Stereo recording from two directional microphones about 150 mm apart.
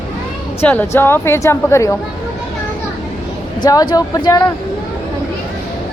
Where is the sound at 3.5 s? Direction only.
25° left (ahead or behind).